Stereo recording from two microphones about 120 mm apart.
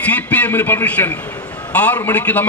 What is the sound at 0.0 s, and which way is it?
A man's voice, 10° left (ahead or behind).